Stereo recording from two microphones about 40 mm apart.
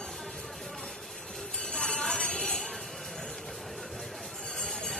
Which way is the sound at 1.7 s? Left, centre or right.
Centre.